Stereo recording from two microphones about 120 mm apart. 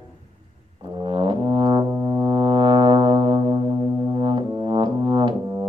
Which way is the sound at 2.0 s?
35° right (ahead or behind).